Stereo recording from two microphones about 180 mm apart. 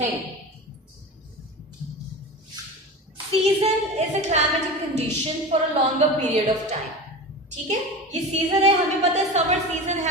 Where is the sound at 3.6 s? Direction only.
40° right (ahead or behind).